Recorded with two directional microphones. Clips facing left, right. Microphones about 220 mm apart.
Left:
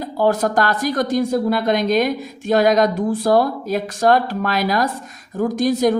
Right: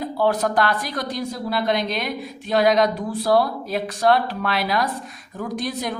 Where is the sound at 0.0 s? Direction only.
45° left (ahead or behind).